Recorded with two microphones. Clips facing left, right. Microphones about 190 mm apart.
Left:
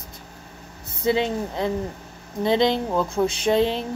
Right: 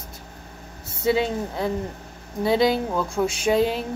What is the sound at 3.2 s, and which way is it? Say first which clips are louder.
Speech: left 1 dB; 15° left (ahead or behind).